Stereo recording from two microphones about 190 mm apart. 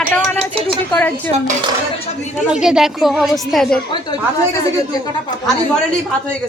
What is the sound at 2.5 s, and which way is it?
Speech, 5° right (ahead or behind).